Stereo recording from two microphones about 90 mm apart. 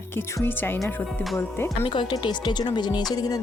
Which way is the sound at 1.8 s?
65° left (ahead or behind).